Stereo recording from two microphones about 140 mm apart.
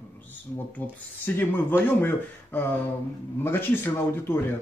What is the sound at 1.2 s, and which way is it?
Speech, 15° left (ahead or behind).